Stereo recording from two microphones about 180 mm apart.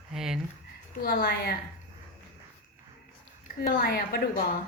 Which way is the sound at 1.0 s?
55° left (ahead or behind).